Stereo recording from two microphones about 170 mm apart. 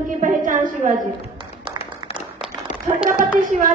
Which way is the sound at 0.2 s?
50° right (ahead or behind).